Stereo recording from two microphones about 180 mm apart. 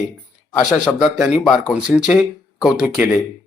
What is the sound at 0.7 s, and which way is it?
Speech, centre (ahead or behind).